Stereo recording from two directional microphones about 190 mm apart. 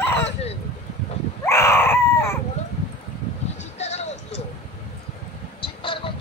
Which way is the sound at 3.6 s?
35° left (ahead or behind).